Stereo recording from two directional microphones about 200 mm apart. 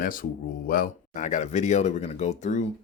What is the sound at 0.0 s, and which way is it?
Speech, 45° left (ahead or behind).